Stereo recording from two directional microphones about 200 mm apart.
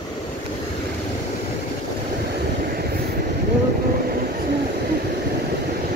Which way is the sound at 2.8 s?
50° right (ahead or behind).